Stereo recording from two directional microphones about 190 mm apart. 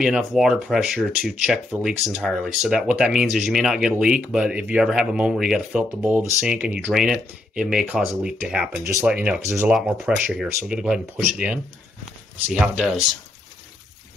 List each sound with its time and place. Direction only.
0.0 s speech: centre (ahead or behind)